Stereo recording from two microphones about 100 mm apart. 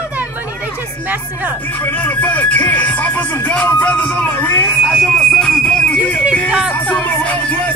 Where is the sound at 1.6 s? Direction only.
15° left (ahead or behind).